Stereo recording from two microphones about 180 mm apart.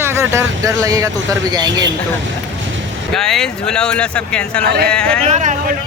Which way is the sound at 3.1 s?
Centre (ahead or behind).